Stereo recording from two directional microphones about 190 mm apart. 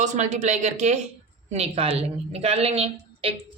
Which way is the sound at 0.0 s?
40° right (ahead or behind).